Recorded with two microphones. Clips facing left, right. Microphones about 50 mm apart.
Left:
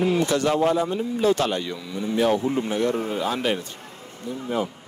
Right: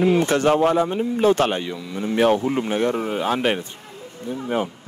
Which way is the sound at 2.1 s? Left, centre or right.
Right.